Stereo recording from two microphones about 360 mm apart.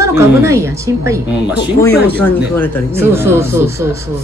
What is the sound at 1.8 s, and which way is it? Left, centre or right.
Speech, centre.